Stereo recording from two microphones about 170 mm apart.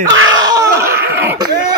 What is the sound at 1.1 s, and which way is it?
Wheeze, 10° right (ahead or behind).